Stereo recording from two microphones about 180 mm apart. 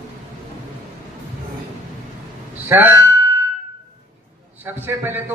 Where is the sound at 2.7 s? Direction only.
10° right (ahead or behind).